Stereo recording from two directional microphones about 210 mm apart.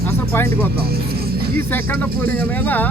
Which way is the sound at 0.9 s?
45° right (ahead or behind).